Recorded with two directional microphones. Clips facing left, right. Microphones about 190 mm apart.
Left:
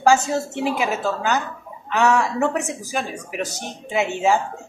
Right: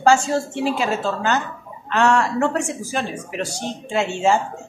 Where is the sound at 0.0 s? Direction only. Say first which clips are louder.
Right 1 dB; 20° left (ahead or behind).